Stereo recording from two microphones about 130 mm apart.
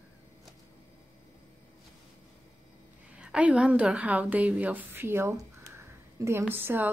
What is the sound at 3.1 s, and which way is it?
A woman's voice, 10° right (ahead or behind).